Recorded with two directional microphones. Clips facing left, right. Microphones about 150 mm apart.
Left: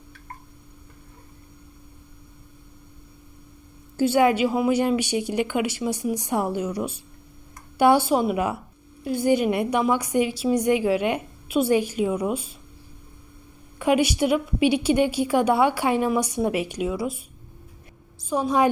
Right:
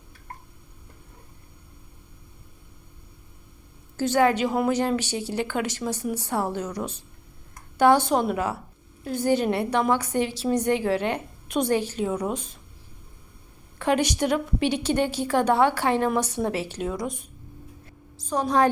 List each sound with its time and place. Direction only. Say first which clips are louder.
3.9 s a woman's voice: left 2 dB; 10° left (ahead or behind)
13.7 s a woman's voice: left 3 dB; 10° left (ahead or behind)
18.3 s a woman's voice: left 1 dB; 10° left (ahead or behind)